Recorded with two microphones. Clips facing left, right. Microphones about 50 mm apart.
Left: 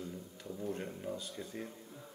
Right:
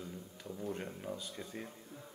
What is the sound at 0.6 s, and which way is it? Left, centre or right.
Mantra, centre.